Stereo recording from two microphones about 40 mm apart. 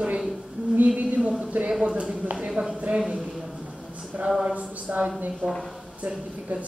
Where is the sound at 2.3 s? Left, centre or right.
Centre.